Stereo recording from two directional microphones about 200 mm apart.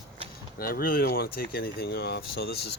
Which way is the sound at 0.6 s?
45° left (ahead or behind).